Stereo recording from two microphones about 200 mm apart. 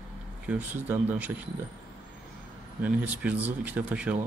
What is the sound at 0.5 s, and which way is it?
Speech, 10° right (ahead or behind).